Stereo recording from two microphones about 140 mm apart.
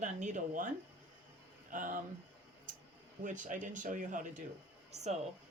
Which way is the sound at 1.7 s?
75° right (ahead or behind).